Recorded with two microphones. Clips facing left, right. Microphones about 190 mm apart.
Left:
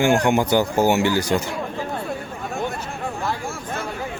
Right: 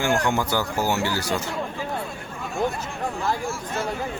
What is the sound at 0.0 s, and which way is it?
Speech, 20° left (ahead or behind).